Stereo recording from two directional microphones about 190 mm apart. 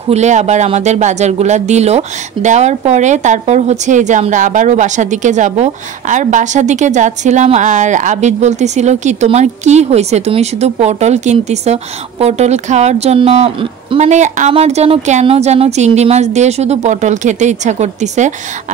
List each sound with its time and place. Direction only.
0.1 s speech: 35° right (ahead or behind)